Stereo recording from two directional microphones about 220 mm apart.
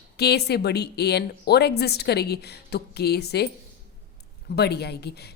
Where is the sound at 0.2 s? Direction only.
45° left (ahead or behind).